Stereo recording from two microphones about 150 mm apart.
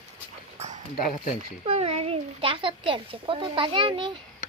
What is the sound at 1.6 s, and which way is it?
Speech, 40° right (ahead or behind).